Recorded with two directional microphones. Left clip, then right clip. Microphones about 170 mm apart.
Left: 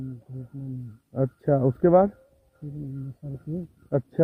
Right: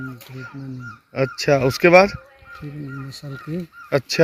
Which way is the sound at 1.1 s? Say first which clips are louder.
Right 6 dB; 15° right (ahead or behind).